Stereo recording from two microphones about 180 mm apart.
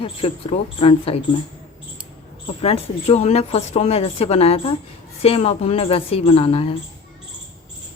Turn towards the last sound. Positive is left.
turn(degrees=30)  # may be behind; listen again after turning